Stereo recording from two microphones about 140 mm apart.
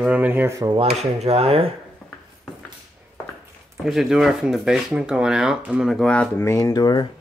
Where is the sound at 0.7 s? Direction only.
45° right (ahead or behind).